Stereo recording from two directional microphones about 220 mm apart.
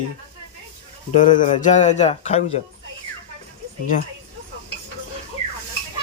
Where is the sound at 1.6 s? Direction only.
35° left (ahead or behind).